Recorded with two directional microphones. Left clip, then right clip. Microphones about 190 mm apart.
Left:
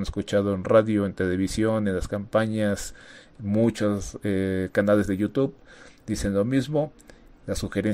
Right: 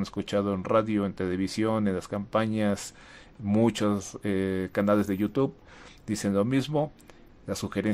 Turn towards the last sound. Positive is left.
turn(degrees=5)  # may be behind; listen again after turning